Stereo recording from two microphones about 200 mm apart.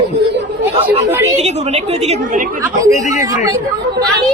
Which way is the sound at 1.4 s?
30° right (ahead or behind).